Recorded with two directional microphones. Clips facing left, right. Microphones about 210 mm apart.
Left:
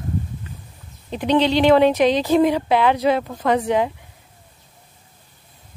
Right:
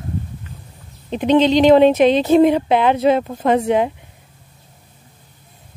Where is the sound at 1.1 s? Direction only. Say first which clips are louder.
Right 4 dB; 20° right (ahead or behind).